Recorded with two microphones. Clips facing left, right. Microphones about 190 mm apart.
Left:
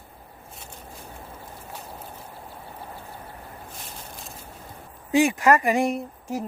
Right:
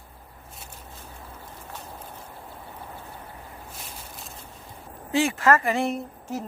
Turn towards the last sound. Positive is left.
turn(degrees=10)  # may be behind; listen again after turning